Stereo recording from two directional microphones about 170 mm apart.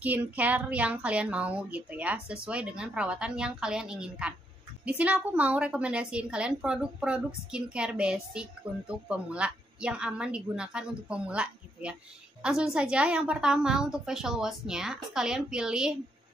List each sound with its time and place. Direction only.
0.0 s a woman's voice: 10° right (ahead or behind)